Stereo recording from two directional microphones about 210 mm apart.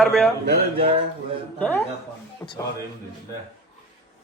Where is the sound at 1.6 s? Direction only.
10° left (ahead or behind).